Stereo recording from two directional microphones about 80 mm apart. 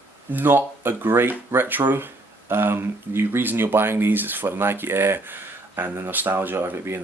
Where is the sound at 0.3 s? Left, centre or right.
Right.